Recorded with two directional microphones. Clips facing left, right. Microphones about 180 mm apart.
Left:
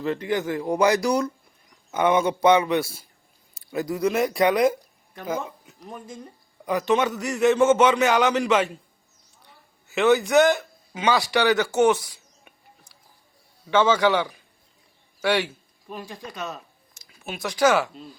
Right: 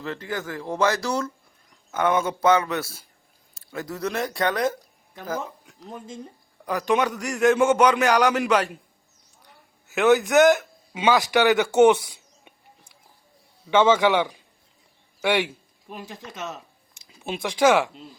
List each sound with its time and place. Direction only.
0.0 s speech: 15° left (ahead or behind)
7.0 s a man's voice: centre (ahead or behind)
9.9 s a man's voice: centre (ahead or behind)
13.7 s a man's voice: 10° right (ahead or behind)
17.1 s a sound: 25° right (ahead or behind)
17.6 s a man's voice: 10° right (ahead or behind)